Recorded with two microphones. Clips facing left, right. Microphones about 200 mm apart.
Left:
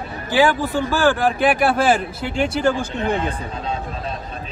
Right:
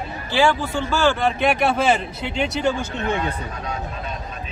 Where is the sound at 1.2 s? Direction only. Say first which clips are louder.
Left 2 dB; 5° left (ahead or behind).